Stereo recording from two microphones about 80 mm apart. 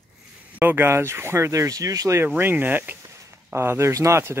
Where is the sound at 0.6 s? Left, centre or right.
Right.